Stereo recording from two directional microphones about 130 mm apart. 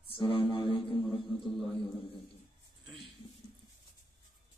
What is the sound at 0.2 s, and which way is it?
Music, 40° left (ahead or behind).